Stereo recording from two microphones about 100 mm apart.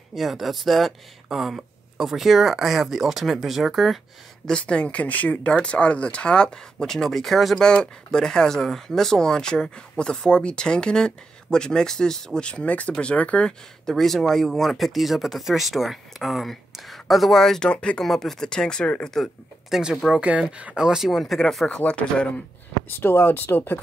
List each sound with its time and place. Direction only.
0.1 s speech: centre (ahead or behind)
4.5 s speech: 10° left (ahead or behind)
22.8 s speech: 25° left (ahead or behind)